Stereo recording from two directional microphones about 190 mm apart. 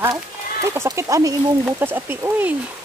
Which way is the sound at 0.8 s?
15° right (ahead or behind).